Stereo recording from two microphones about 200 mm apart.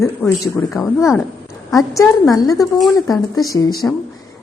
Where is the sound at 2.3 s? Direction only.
15° left (ahead or behind).